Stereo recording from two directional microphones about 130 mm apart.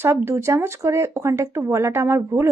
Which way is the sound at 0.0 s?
20° right (ahead or behind).